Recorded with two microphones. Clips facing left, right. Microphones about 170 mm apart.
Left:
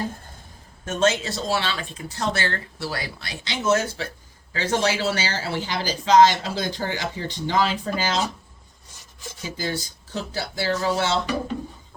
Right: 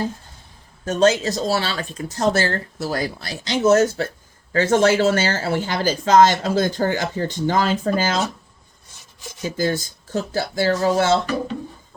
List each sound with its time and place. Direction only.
0.9 s speech: 35° right (ahead or behind)
9.6 s speech: 50° right (ahead or behind)